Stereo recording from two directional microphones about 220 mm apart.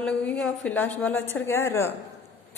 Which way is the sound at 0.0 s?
5° left (ahead or behind).